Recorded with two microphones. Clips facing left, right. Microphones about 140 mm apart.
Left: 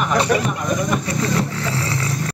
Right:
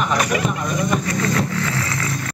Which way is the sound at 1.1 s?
30° left (ahead or behind).